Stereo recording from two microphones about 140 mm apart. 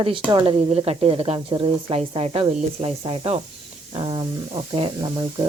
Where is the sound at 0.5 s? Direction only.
50° right (ahead or behind); by 5.1 s 30° right (ahead or behind).